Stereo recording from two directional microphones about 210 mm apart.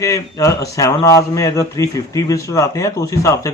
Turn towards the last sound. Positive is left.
turn(degrees=15)  # may be behind; listen again after turning